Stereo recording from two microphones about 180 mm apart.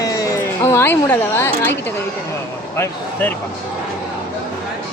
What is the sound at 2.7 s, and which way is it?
Speech, 10° left (ahead or behind).